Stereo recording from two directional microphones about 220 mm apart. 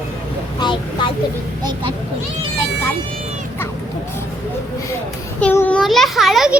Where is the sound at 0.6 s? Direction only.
20° left (ahead or behind).